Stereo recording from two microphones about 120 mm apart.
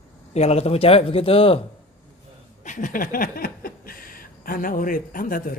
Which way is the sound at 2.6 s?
90° left.